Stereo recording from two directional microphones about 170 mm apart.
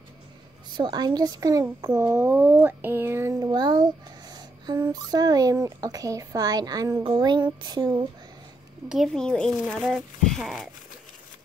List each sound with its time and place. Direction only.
0.7 s a child's voice: 25° right (ahead or behind)
4.3 s a sound: 25° right (ahead or behind)
4.9 s a child's voice: 25° right (ahead or behind)
8.8 s speech: centre (ahead or behind)